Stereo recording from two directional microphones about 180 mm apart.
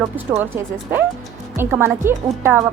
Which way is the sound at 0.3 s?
10° right (ahead or behind).